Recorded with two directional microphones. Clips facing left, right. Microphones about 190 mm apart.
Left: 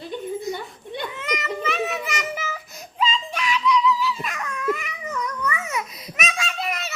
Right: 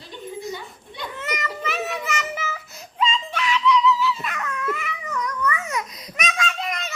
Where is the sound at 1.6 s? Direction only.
Centre (ahead or behind).